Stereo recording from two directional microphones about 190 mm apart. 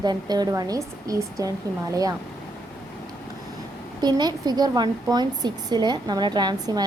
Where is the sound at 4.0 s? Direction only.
20° right (ahead or behind).